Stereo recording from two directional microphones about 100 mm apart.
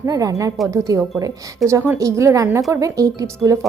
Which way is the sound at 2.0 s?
30° right (ahead or behind).